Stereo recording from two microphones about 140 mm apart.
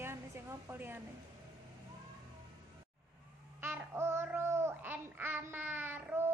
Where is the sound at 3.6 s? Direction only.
15° right (ahead or behind).